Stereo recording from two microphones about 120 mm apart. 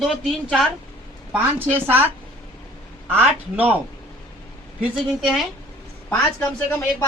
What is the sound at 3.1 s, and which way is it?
Speech, 15° right (ahead or behind).